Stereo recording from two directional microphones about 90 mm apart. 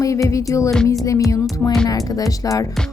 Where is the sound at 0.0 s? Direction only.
40° left (ahead or behind).